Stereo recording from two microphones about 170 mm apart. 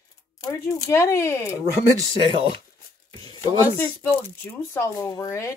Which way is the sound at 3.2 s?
15° left (ahead or behind).